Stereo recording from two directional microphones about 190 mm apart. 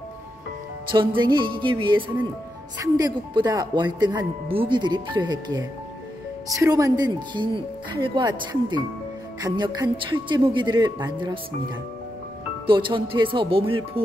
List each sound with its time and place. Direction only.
0.9 s speech: 25° right (ahead or behind)
12.6 s speech: 25° right (ahead or behind)